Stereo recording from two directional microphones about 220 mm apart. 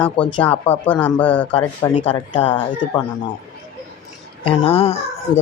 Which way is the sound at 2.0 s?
25° left (ahead or behind).